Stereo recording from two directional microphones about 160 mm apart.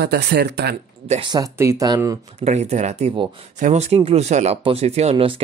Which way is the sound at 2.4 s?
45° right (ahead or behind).